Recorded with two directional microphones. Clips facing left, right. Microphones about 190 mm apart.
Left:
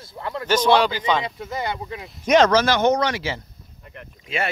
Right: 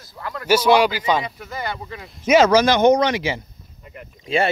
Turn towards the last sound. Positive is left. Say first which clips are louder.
# right 7 dB
turn(degrees=-30)  # may be behind; listen again after turning